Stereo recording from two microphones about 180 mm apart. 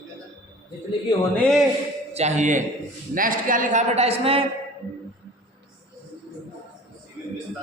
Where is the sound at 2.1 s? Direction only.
40° right (ahead or behind).